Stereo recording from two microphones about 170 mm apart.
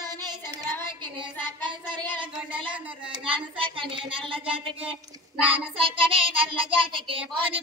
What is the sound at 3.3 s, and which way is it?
Speech, 30° right (ahead or behind).